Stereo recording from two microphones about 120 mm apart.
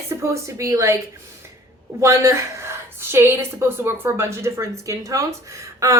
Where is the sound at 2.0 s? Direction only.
25° right (ahead or behind).